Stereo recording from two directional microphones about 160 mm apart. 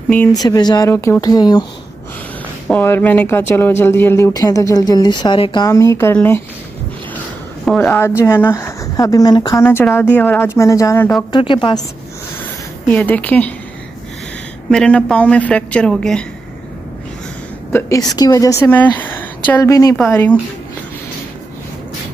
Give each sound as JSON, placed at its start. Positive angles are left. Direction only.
{"t": 0.3, "sound": "speech", "side_deg": 25}
{"t": 2.7, "sound": "speech", "side_deg": 10}
{"t": 5.7, "sound": "speech", "side_deg": 20}
{"t": 7.6, "sound": "speech", "side_deg": 5}
{"t": 9.7, "sound": "speech", "side_deg": 15}
{"t": 11.3, "sound": "a woman's voice", "side_deg": 30}
{"t": 12.9, "sound": "speech", "side_deg": 10}
{"t": 14.7, "sound": "speech", "side_deg": 5}
{"t": 17.7, "sound": "speech", "side_deg": 20}
{"t": 20.0, "sound": "speech", "side_deg": 10}